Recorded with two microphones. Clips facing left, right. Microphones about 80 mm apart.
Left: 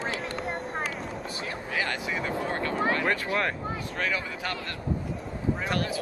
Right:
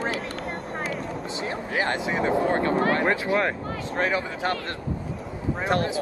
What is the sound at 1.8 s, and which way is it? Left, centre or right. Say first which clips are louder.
Speech: right 6 dB; right.